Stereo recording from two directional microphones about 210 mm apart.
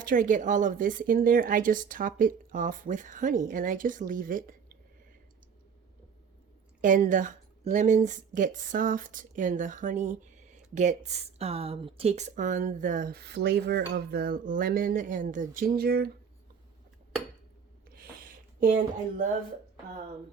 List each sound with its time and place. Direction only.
0.0 s speech: 40° right (ahead or behind)
6.8 s speech: 40° right (ahead or behind)
18.2 s a sound: 40° right (ahead or behind)